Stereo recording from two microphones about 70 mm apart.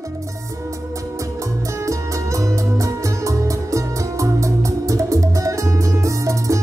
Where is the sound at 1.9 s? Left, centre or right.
Right.